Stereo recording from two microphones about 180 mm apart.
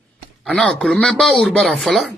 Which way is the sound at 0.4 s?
5° left (ahead or behind).